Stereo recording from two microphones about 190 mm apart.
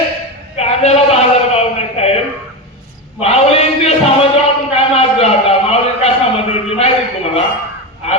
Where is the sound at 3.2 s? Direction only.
35° left (ahead or behind).